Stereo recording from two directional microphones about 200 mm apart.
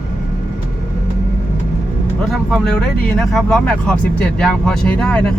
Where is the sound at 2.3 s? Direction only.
5° left (ahead or behind).